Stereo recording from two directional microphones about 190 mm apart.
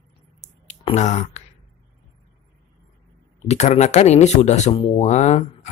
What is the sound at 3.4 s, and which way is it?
Speech, 35° left (ahead or behind).